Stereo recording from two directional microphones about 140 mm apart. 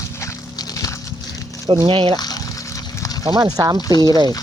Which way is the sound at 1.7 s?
40° right (ahead or behind).